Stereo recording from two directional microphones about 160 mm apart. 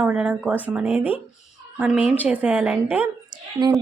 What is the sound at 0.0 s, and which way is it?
A woman's voice, 5° right (ahead or behind).